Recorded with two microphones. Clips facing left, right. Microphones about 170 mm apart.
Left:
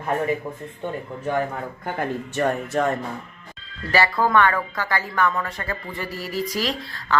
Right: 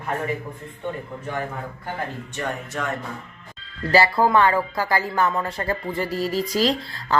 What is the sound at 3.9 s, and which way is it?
Music, 30° right (ahead or behind).